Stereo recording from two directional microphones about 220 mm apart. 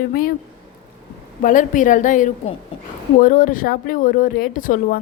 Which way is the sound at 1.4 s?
35° left (ahead or behind).